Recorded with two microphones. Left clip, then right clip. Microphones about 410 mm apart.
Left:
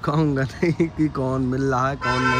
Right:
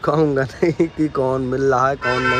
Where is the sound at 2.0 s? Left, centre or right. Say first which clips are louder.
Right 3 dB; left.